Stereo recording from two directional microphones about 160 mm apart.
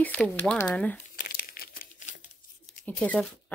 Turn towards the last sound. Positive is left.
turn(degrees=5)  # may be behind; listen again after turning